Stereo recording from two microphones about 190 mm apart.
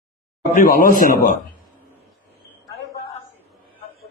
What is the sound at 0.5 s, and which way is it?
Speech, 45° left (ahead or behind).